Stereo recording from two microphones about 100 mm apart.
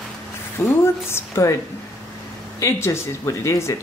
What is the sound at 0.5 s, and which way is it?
Speech, 25° left (ahead or behind).